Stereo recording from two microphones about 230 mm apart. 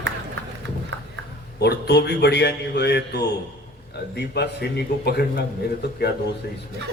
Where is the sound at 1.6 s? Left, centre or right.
Left.